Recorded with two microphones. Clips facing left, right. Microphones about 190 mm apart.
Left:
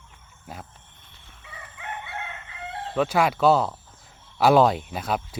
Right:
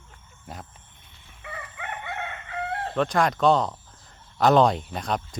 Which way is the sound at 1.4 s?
65° right (ahead or behind).